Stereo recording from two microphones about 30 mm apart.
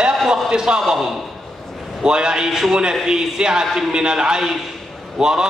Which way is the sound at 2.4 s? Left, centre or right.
Centre.